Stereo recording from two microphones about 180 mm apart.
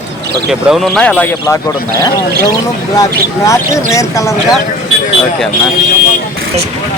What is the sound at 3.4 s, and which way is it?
Speech, 15° left (ahead or behind).